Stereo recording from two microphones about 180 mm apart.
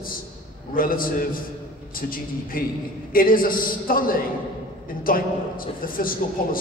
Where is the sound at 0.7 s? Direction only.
50° left (ahead or behind).